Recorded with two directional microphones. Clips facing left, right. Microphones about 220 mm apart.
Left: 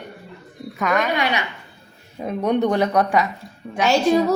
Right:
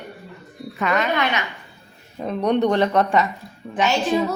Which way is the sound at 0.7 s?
Centre (ahead or behind).